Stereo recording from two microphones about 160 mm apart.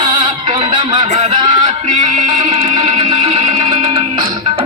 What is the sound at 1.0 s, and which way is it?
Speech, 45° right (ahead or behind).